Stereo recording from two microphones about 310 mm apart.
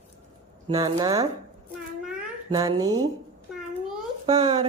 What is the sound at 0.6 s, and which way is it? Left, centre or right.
Speech, centre.